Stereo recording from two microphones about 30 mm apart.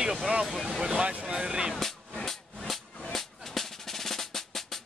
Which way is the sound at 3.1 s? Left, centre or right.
Centre.